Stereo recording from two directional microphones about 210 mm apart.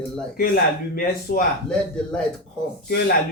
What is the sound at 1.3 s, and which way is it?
Speech, 45° left (ahead or behind).